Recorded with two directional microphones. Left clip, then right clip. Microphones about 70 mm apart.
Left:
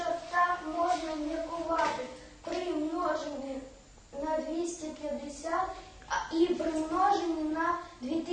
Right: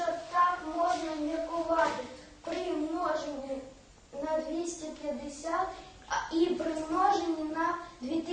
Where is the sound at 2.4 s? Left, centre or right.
Centre.